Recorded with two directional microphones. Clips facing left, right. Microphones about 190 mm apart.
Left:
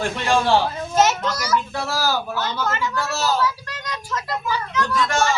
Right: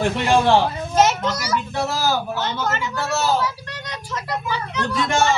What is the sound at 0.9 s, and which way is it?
A child's voice, 20° right (ahead or behind).